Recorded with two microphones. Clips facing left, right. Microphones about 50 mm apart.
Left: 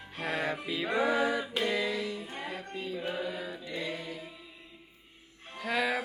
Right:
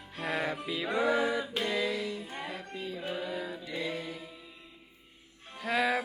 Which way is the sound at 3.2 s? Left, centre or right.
Centre.